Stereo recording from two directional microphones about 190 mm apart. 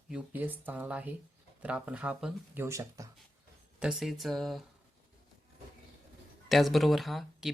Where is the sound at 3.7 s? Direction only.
5° right (ahead or behind).